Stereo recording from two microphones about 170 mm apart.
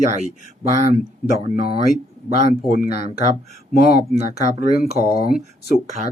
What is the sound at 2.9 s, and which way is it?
Speech, 40° right (ahead or behind).